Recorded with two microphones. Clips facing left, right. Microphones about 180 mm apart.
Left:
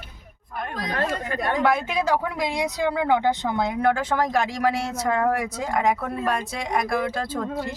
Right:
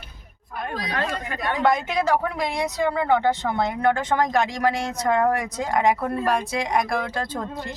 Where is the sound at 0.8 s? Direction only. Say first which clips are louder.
Left 2 dB; 50° left (ahead or behind).